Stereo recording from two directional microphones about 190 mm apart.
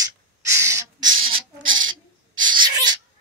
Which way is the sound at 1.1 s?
90° right.